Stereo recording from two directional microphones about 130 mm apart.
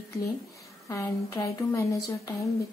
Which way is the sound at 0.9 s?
25° left (ahead or behind).